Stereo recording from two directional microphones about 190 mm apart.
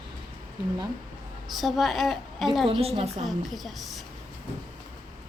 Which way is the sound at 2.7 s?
30° right (ahead or behind).